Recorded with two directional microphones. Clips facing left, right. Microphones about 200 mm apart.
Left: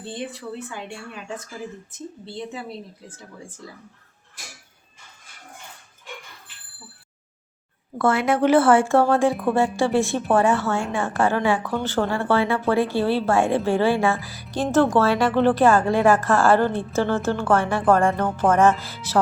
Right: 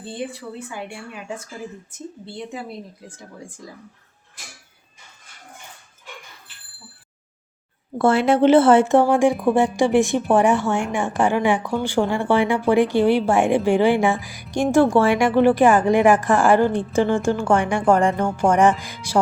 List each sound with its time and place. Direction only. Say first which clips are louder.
0.1 s speech: right 1 dB; 10° right (ahead or behind)
2.2 s speech: even; 15° right (ahead or behind)
7.9 s a woman's voice: right 4 dB; 30° right (ahead or behind); by 19.2 s 10° right (ahead or behind)